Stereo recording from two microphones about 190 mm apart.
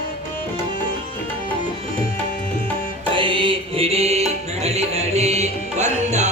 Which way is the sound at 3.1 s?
25° right (ahead or behind).